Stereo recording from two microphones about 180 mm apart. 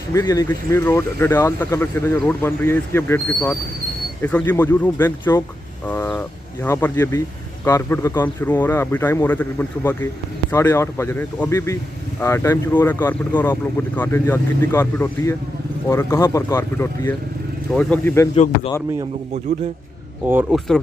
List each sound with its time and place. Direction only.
0.1 s speech: 20° left (ahead or behind)
18.3 s speech: 35° left (ahead or behind)
20.2 s speech: 10° right (ahead or behind)
20.5 s speech: centre (ahead or behind)